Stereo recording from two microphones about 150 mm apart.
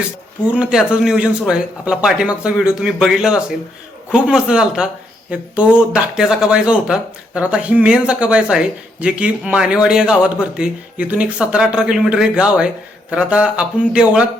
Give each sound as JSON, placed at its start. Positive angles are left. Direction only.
{"t": 0.5, "sound": "speech", "side_deg": -5}